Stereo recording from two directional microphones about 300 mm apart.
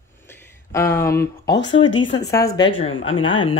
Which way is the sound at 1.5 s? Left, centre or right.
Left.